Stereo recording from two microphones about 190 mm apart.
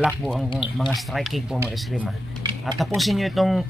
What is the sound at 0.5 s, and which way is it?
Speech, 25° left (ahead or behind).